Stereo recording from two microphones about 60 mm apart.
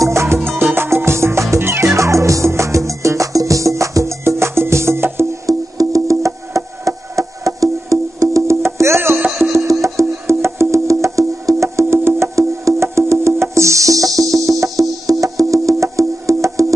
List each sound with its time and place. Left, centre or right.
0.0 s music: right
5.5 s music: right
8.5 s music: right